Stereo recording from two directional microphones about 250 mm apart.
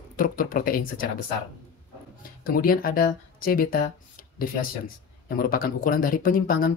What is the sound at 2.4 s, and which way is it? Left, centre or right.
Speech, left.